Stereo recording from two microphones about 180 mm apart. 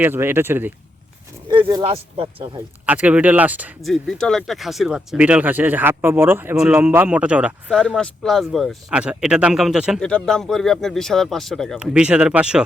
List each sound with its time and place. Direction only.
0.0 s speech: 10° right (ahead or behind)
1.6 s speech: 30° right (ahead or behind)
2.8 s speech: 10° right (ahead or behind)